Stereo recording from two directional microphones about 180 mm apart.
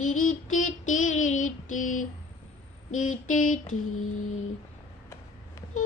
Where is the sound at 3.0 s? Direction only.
45° left (ahead or behind).